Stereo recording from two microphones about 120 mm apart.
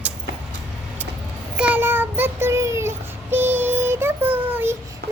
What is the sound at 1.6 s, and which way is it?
Child singing, 15° right (ahead or behind).